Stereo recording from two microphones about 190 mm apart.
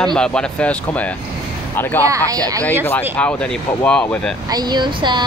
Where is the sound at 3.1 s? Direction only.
5° left (ahead or behind).